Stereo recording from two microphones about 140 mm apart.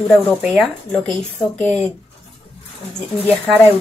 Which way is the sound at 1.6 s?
10° left (ahead or behind).